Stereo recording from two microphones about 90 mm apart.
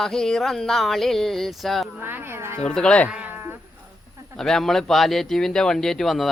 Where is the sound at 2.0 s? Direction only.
25° right (ahead or behind).